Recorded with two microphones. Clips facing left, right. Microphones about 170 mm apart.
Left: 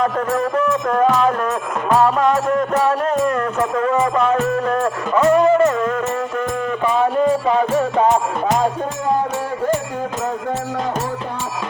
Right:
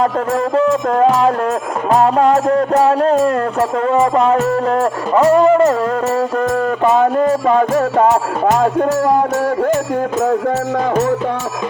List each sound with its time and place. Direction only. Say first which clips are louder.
0.0 s music: right 3 dB; 30° right (ahead or behind)
6.8 s music: right 3 dB; 45° right (ahead or behind)